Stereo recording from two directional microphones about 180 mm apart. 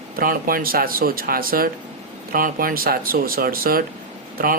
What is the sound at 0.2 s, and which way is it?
Speech, 55° right (ahead or behind).